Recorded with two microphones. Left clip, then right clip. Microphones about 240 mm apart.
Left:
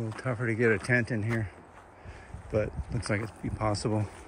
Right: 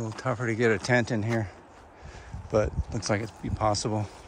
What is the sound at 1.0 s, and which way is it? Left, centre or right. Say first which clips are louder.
Speech: right 3 dB; right.